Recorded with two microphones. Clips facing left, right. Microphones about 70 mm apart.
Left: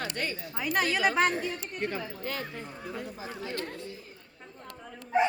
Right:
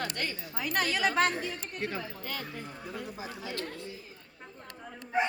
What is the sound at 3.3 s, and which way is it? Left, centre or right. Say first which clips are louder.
Speech: left 2 dB; left.